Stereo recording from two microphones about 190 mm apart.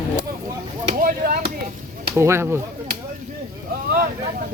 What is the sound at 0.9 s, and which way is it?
Chop, 50° right (ahead or behind).